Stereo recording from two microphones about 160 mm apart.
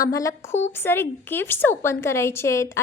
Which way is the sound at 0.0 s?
20° left (ahead or behind).